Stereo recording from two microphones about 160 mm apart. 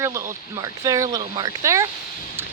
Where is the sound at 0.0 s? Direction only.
15° right (ahead or behind).